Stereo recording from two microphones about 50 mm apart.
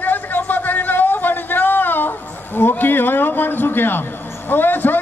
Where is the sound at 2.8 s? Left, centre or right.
Left.